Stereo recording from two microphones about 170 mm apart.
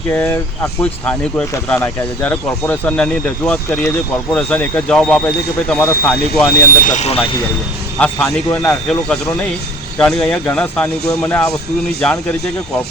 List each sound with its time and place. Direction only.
0.1 s speech: 10° left (ahead or behind)
6.5 s speech: 55° left (ahead or behind); by 7.4 s 35° left (ahead or behind)
7.9 s speech: 5° left (ahead or behind)